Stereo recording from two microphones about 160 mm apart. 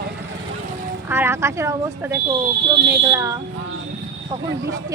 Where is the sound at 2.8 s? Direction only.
90° right.